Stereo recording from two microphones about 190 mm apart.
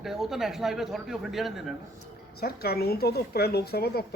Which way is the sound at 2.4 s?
55° left (ahead or behind).